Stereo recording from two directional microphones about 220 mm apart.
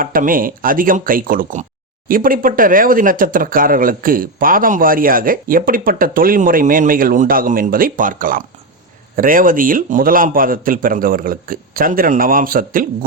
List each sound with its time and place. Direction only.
0.0 s speech: 40° right (ahead or behind)